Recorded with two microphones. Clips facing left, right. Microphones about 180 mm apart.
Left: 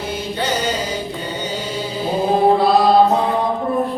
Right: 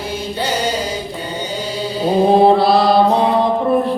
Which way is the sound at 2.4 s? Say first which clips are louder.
Right 2 dB; 75° right (ahead or behind).